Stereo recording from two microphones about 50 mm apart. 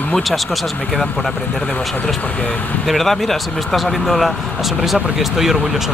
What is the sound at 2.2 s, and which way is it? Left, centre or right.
Speech, left.